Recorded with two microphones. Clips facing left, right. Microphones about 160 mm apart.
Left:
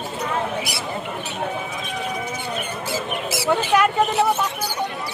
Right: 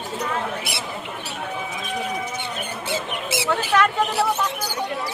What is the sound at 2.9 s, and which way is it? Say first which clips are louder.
Speech: even; 25° right (ahead or behind).